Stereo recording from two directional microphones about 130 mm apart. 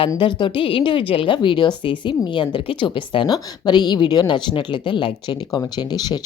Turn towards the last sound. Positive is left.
turn(degrees=30)  # may be behind; listen again after turning